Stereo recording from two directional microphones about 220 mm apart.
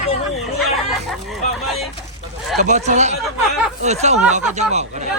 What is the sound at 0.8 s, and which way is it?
Chicken, centre (ahead or behind).